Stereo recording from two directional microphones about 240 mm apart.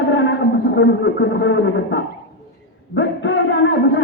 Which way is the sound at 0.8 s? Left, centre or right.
Left.